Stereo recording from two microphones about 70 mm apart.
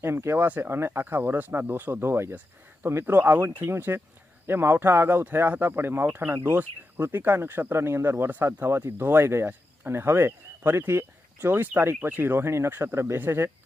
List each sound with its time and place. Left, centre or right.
0.0 s speech: right
0.4 s speech: right